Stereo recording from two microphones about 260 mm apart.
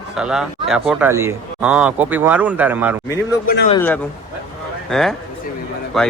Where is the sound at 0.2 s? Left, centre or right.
Centre.